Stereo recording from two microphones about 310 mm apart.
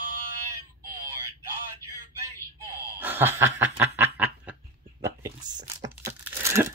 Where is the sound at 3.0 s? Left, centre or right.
Centre.